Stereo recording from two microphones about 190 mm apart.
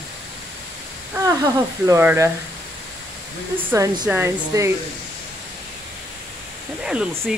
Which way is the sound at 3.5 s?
15° right (ahead or behind).